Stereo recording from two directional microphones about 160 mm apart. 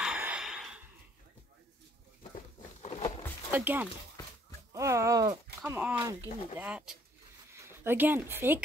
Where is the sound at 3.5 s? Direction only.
10° right (ahead or behind).